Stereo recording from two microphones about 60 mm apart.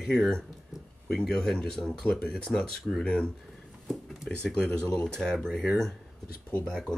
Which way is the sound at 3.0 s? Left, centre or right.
Centre.